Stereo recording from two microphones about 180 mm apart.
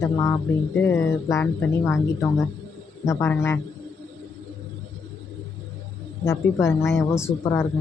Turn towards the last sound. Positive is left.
turn(degrees=15)  # may be behind; listen again after turning